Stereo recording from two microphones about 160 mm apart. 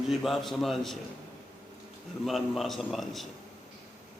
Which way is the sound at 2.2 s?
Centre (ahead or behind).